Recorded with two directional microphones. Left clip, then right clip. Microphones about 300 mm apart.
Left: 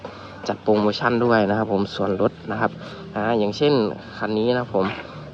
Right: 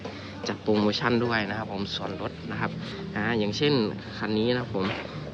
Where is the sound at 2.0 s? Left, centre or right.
Left.